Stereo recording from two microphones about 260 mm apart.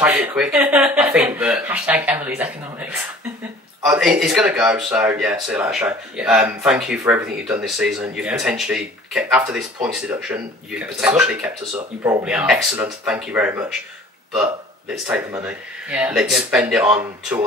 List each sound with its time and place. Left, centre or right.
0.0 s speech: centre
15.4 s speech: centre